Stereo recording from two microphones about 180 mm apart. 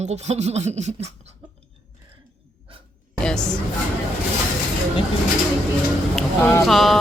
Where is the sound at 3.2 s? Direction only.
5° left (ahead or behind).